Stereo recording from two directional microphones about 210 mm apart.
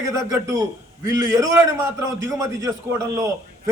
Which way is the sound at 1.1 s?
15° right (ahead or behind).